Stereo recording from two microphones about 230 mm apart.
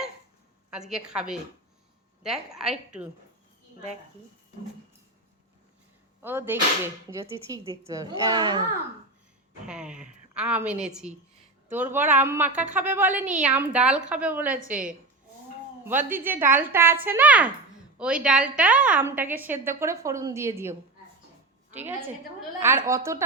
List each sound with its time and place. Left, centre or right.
0.7 s a woman's voice: centre
2.6 s a woman's voice: centre
6.2 s a woman's voice: centre
9.6 s a woman's voice: centre
14.5 s a woman's voice: right
15.8 s a woman's voice: centre